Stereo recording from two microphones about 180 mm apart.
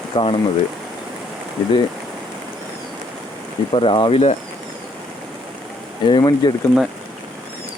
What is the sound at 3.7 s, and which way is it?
Speech, 30° left (ahead or behind).